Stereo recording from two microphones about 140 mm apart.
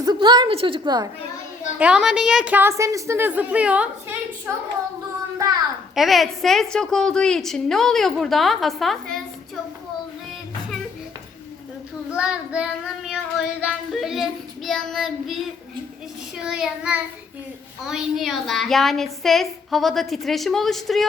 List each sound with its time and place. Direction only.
0.0 s a woman's voice: 30° right (ahead or behind)
1.8 s a woman's voice: 5° right (ahead or behind)
5.9 s a woman's voice: centre (ahead or behind)
12.1 s child singing: 5° right (ahead or behind)
16.4 s a woman's voice: 5° right (ahead or behind)